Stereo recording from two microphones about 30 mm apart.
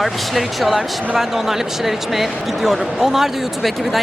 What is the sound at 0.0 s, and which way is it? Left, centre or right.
Speech, centre.